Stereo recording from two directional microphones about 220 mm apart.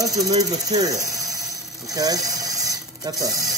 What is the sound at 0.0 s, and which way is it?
Speech, 15° right (ahead or behind).